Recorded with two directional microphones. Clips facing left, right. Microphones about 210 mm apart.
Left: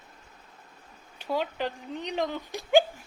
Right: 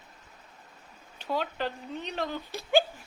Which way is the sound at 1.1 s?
10° left (ahead or behind).